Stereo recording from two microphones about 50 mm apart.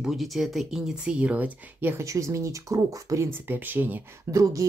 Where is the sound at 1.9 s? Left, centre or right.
Right.